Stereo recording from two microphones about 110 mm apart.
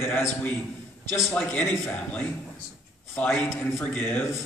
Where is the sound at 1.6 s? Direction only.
25° left (ahead or behind).